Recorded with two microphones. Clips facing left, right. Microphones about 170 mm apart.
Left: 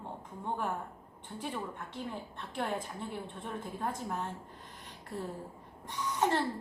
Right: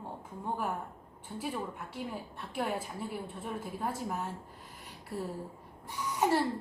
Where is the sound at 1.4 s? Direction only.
10° right (ahead or behind).